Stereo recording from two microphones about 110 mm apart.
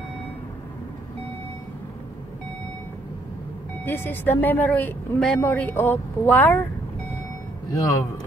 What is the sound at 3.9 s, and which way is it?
Speech, 20° left (ahead or behind).